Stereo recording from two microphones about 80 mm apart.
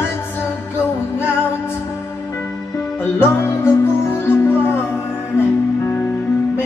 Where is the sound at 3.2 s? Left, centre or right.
Left.